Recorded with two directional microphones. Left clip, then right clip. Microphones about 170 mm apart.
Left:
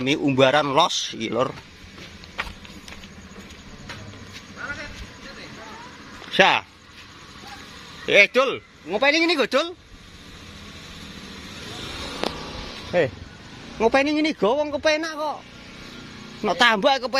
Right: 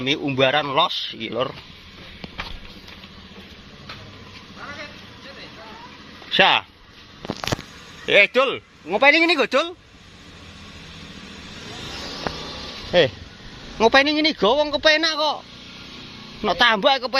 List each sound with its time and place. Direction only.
0.0 s speech: 20° left (ahead or behind)
6.3 s a man's voice: 10° left (ahead or behind)
8.0 s a man's voice: centre (ahead or behind)
8.9 s speech: 20° right (ahead or behind)
9.2 s a man's voice: 5° right (ahead or behind)
11.6 s vehicle: 45° right (ahead or behind)
13.8 s a man's voice: centre (ahead or behind)
16.5 s a man's voice: 15° left (ahead or behind)